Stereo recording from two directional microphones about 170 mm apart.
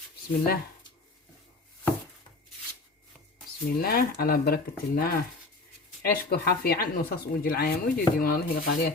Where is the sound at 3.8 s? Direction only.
60° left (ahead or behind).